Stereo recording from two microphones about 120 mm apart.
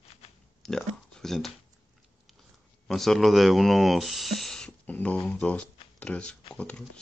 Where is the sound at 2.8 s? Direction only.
5° left (ahead or behind).